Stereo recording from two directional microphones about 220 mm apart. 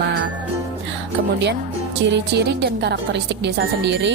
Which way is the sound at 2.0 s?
50° right (ahead or behind).